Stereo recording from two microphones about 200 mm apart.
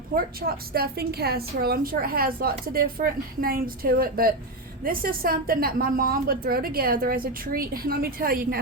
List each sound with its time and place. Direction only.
0.1 s a woman's voice: 50° right (ahead or behind)